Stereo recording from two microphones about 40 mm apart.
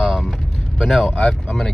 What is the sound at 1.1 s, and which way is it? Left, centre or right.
Speech, left.